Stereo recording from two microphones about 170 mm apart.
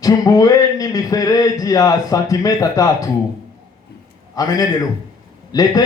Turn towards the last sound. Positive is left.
turn(degrees=20)  # may be behind; listen again after turning